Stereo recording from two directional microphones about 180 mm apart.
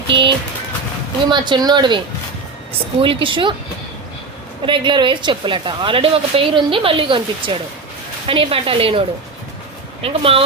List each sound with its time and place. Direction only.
0.1 s a woman's voice: 25° right (ahead or behind)
3.0 s a woman's voice: 30° right (ahead or behind)
4.6 s a woman's voice: 25° right (ahead or behind)